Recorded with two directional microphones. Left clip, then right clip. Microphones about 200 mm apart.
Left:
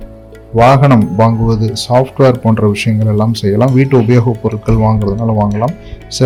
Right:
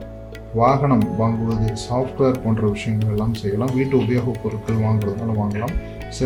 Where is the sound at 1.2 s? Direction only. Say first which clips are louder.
Left 10 dB; 30° left (ahead or behind).